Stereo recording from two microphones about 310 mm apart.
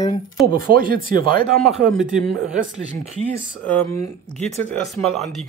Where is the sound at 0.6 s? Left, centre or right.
Right.